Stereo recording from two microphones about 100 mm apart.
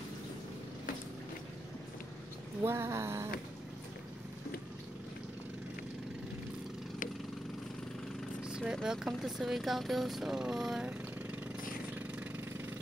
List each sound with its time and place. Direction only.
2.6 s a sound: 25° right (ahead or behind)
8.5 s vehicle: 10° right (ahead or behind)
8.8 s speech: 5° right (ahead or behind)
11.9 s vehicle: 15° right (ahead or behind)